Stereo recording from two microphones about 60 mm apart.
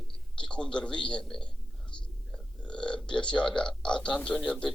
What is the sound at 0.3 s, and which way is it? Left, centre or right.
A man's voice, centre.